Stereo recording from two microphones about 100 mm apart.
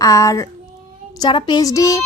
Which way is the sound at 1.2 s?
45° left (ahead or behind).